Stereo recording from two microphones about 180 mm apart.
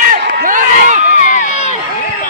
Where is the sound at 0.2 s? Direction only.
70° right (ahead or behind).